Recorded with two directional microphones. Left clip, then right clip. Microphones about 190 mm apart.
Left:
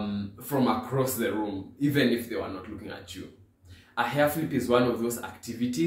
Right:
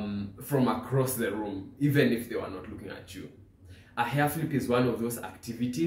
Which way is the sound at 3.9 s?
10° right (ahead or behind).